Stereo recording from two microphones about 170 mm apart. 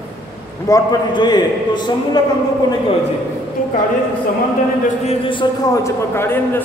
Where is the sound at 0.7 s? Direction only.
25° left (ahead or behind).